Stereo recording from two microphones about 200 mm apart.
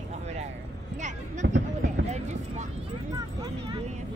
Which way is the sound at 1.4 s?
70° right (ahead or behind).